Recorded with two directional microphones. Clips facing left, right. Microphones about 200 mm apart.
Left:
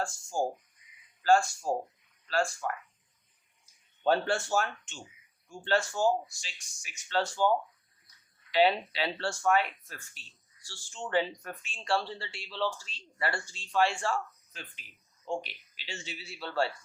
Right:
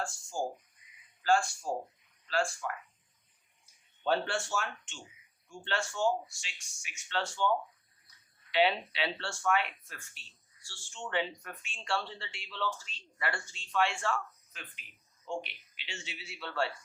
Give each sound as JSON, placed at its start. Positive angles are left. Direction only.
{"t": 1.2, "sound": "speech", "side_deg": 40}
{"t": 4.0, "sound": "speech", "side_deg": 40}
{"t": 8.5, "sound": "speech", "side_deg": 40}